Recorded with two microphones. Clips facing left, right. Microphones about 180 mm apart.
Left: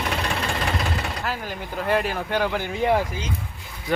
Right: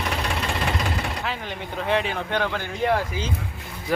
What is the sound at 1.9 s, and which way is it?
Speech, 5° left (ahead or behind).